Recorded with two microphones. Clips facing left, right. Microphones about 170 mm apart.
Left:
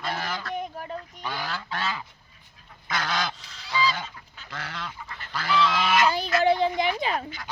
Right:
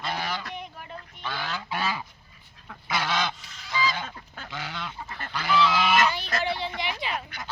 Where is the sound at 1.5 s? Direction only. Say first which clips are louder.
Right 1 dB; 10° right (ahead or behind).